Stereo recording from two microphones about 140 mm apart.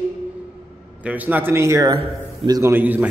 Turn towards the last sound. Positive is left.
turn(degrees=-15)  # may be behind; listen again after turning